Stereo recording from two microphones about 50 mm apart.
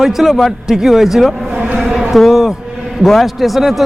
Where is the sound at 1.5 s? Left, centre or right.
Right.